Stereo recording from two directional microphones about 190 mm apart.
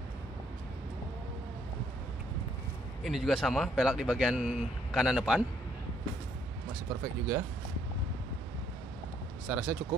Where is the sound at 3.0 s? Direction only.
Centre (ahead or behind).